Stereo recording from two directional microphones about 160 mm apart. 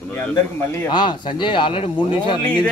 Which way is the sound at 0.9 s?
30° left (ahead or behind).